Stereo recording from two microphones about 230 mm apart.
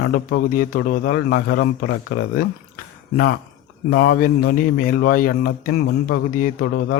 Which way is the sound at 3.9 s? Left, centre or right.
Left.